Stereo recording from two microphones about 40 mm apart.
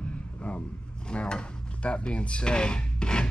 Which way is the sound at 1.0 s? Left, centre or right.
Left.